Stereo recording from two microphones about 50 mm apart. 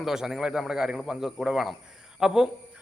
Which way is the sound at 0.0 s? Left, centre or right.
Centre.